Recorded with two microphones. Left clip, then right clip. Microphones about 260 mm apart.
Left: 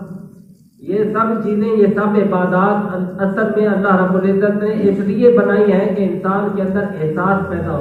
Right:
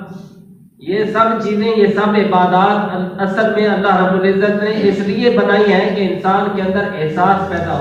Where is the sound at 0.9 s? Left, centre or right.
Right.